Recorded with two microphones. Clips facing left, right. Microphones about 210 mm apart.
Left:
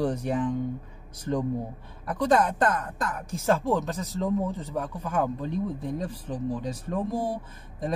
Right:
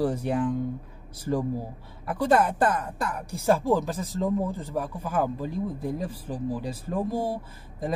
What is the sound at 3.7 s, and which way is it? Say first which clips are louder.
Speech: right 2 dB; centre (ahead or behind).